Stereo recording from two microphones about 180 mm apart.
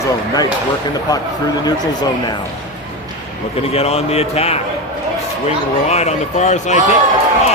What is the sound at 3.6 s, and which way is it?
Speech, 35° left (ahead or behind).